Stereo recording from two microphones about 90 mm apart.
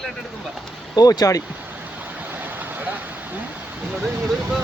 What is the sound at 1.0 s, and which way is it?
Speech, 45° left (ahead or behind).